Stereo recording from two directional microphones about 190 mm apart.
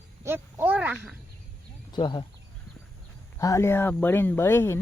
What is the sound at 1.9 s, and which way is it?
Speech, 25° left (ahead or behind).